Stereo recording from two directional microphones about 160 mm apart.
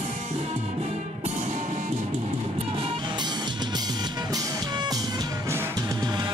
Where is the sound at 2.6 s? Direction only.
35° right (ahead or behind).